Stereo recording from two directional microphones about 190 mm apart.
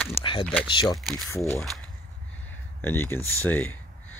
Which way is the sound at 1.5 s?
Centre (ahead or behind).